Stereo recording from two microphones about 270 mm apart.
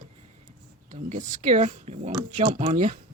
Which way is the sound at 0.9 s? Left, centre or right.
Right.